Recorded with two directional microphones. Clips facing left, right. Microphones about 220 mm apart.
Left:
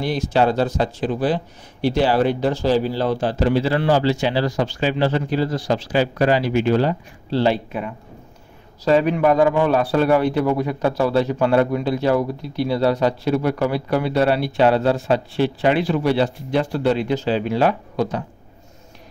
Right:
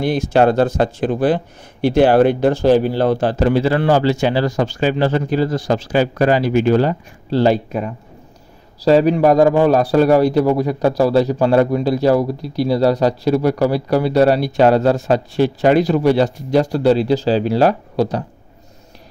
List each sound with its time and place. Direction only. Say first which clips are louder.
0.0 s a man's voice: right 5 dB; 50° right (ahead or behind)